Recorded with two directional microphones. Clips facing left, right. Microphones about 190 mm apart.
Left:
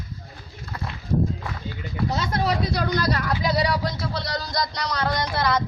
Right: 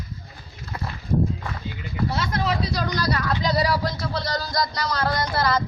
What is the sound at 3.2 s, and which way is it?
Speech, 5° left (ahead or behind).